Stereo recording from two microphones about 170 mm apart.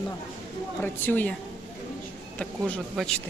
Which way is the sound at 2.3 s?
5° left (ahead or behind).